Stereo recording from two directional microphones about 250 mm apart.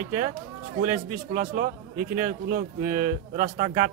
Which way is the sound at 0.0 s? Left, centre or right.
Right.